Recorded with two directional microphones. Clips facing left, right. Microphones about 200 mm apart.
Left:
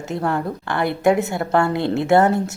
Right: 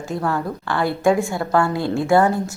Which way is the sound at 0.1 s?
25° left (ahead or behind).